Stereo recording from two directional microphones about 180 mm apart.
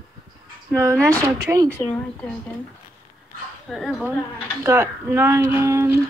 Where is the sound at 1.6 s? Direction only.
10° left (ahead or behind).